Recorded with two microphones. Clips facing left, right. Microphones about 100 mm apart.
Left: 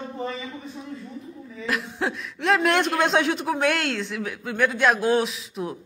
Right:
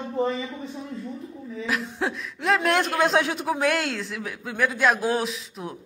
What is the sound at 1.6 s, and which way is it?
Speech, centre (ahead or behind).